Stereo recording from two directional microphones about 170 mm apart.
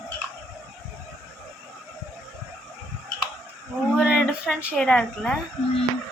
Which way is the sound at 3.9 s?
5° right (ahead or behind).